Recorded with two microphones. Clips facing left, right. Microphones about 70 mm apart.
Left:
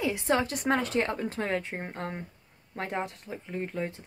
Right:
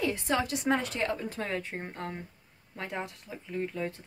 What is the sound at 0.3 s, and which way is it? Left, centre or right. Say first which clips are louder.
Speech: left 2 dB; left.